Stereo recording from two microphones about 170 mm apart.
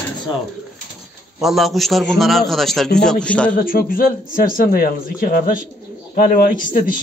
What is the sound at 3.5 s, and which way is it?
A man's voice, 55° left (ahead or behind).